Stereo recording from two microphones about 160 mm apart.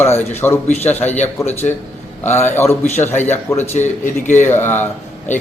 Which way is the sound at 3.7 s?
50° left (ahead or behind).